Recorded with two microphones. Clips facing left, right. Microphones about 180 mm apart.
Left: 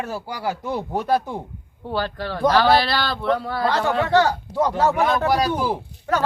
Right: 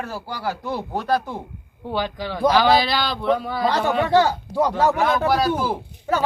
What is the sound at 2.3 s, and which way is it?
Speech, centre (ahead or behind).